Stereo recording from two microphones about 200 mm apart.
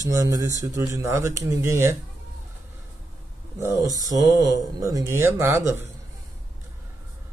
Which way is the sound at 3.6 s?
15° right (ahead or behind).